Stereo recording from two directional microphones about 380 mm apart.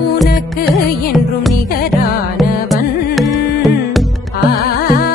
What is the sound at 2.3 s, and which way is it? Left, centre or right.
Music, centre.